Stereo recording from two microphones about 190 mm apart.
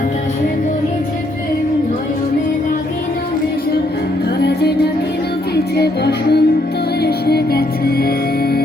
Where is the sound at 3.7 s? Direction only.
60° left (ahead or behind).